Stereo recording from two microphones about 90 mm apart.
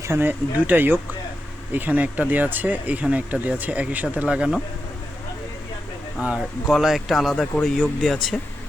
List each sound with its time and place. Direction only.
0.1 s speech: 25° right (ahead or behind)
6.1 s speech: 10° right (ahead or behind)